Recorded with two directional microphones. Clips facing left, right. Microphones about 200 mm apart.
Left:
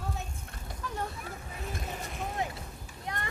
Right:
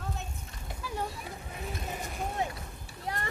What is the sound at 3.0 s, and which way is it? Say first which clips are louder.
Vehicle: right 2 dB; 30° right (ahead or behind).